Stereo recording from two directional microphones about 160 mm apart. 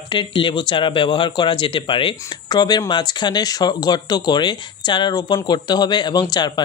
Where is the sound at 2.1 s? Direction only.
20° left (ahead or behind).